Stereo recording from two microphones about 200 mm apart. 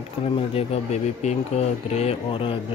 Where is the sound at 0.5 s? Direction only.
30° left (ahead or behind).